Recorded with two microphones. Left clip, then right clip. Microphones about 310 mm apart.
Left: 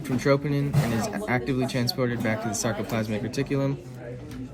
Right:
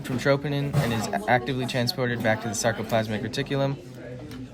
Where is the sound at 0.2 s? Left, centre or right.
Right.